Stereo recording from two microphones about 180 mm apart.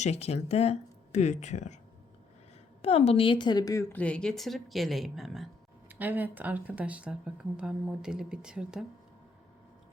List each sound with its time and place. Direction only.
0.0 s speech: 35° left (ahead or behind)
2.8 s a woman's voice: 35° left (ahead or behind); by 8.8 s 5° right (ahead or behind)